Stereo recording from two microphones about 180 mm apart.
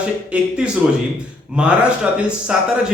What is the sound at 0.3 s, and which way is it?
Speech, 5° right (ahead or behind).